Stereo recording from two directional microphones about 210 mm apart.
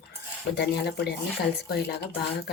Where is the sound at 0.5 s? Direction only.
50° left (ahead or behind).